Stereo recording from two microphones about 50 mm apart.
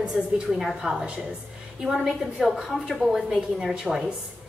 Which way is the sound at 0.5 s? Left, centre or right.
Centre.